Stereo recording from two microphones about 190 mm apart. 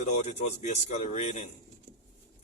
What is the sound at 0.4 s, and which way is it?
Speech, 35° left (ahead or behind).